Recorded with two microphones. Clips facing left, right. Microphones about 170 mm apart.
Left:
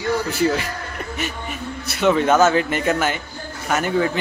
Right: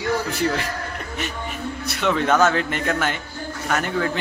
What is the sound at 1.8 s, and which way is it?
A man's voice, 5° left (ahead or behind).